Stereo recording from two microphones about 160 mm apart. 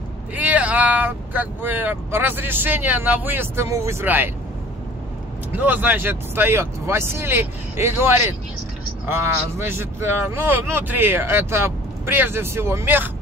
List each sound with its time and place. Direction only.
0.4 s speech: 10° right (ahead or behind)
5.6 s speech: 10° right (ahead or behind)